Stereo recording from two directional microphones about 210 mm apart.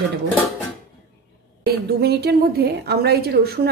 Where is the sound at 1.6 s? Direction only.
50° right (ahead or behind).